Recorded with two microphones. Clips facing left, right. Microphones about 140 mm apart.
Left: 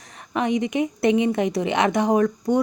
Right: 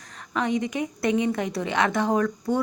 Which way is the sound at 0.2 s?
20° left (ahead or behind).